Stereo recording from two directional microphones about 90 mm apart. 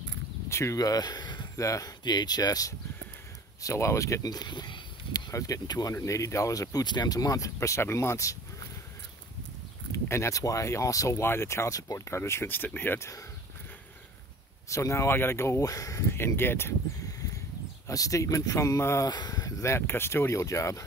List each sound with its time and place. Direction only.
0.5 s speech: 30° left (ahead or behind)
0.7 s speech: 45° left (ahead or behind)
1.6 s speech: 40° left (ahead or behind)
3.6 s speech: 35° left (ahead or behind); by 5.3 s 55° left (ahead or behind)
5.3 s speech: 40° left (ahead or behind)
9.9 s speech: 30° left (ahead or behind)
12.2 s speech: 25° left (ahead or behind)
14.7 s speech: 35° left (ahead or behind)
17.8 s speech: 40° left (ahead or behind)
19.0 s speech: 50° left (ahead or behind)